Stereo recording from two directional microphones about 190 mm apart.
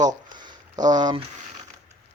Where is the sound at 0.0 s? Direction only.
20° right (ahead or behind).